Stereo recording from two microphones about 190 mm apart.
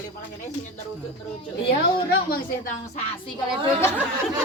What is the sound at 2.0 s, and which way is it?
Speech, 50° left (ahead or behind).